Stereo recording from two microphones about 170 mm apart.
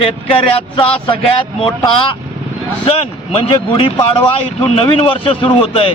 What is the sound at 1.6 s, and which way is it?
Speech, 30° left (ahead or behind).